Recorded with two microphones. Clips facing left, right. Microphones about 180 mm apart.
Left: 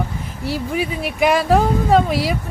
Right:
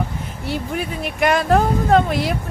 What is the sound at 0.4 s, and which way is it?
Speech, centre (ahead or behind).